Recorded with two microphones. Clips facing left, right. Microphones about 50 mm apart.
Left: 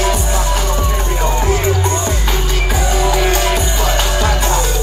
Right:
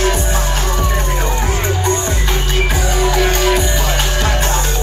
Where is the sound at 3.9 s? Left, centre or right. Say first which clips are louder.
Left 1 dB; right.